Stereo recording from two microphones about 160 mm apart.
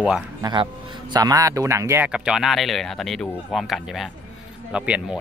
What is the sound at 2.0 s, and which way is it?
Speech, 5° right (ahead or behind).